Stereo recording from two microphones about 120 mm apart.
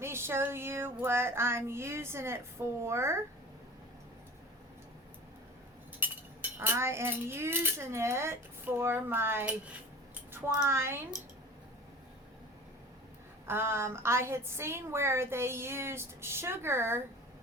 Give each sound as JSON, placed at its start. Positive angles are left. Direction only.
{"t": 0.0, "sound": "a woman's voice", "side_deg": -20}
{"t": 6.0, "sound": "chink", "side_deg": -15}
{"t": 6.6, "sound": "a woman's voice", "side_deg": -20}
{"t": 13.4, "sound": "a woman's voice", "side_deg": -20}